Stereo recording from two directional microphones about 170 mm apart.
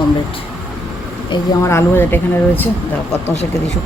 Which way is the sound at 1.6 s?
15° left (ahead or behind).